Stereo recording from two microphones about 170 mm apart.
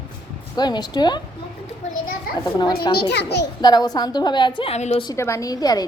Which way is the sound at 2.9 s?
80° left.